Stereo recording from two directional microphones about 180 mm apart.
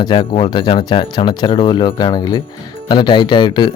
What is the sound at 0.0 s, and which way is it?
Speech, 25° left (ahead or behind).